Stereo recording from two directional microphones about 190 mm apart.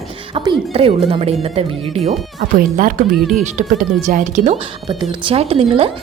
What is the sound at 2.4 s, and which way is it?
Speech, 50° right (ahead or behind).